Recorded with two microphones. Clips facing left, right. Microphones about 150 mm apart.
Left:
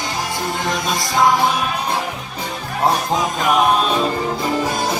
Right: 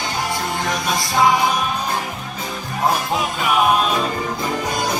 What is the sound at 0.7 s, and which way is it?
Music, centre (ahead or behind).